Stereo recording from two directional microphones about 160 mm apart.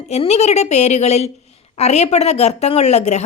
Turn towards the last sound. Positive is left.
turn(degrees=45)  # may be behind; listen again after turning